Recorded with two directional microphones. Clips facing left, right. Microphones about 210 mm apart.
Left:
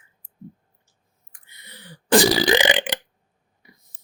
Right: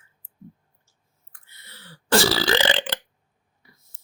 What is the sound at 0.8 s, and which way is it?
Burping, 15° left (ahead or behind).